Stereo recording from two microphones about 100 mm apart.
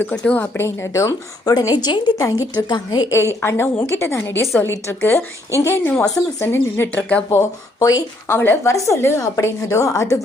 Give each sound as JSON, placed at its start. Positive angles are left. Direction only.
{"t": 0.0, "sound": "a woman's voice", "side_deg": 10}
{"t": 2.2, "sound": "a woman's voice", "side_deg": 35}
{"t": 2.6, "sound": "a woman's voice", "side_deg": 50}
{"t": 3.1, "sound": "a woman's voice", "side_deg": 25}